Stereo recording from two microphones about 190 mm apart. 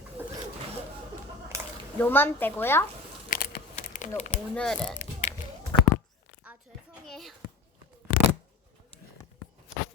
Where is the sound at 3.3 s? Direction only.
50° left (ahead or behind).